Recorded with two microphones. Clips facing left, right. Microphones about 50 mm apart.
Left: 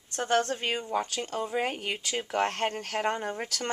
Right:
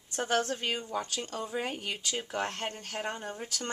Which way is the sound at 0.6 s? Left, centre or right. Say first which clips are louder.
Left 4 dB; left.